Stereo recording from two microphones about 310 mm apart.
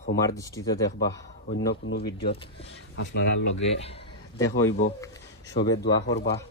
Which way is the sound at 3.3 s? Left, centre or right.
Left.